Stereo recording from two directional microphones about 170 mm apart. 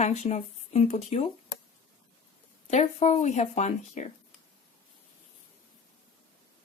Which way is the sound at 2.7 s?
40° left (ahead or behind).